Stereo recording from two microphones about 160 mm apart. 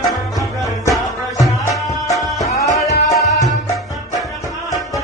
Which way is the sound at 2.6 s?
20° left (ahead or behind).